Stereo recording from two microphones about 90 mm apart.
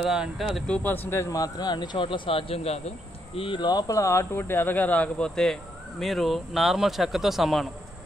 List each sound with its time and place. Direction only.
0.0 s speech: 5° right (ahead or behind)
0.7 s speech: 20° left (ahead or behind); by 2.6 s 90° left
3.3 s speech: 70° left (ahead or behind); by 7.6 s 5° right (ahead or behind)